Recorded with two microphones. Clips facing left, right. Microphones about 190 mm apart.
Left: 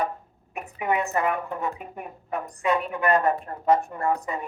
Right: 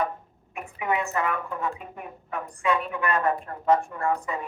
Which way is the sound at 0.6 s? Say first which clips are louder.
Left 2 dB; 40° left (ahead or behind).